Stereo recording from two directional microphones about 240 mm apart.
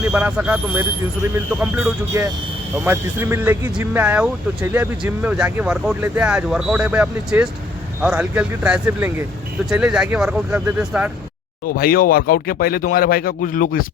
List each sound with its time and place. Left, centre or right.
0.1 s speech: centre
11.6 s speech: left